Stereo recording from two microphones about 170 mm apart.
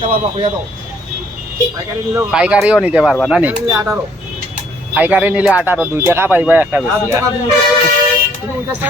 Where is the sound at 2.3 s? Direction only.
5° right (ahead or behind).